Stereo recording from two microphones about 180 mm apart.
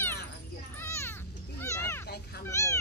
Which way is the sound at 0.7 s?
15° left (ahead or behind).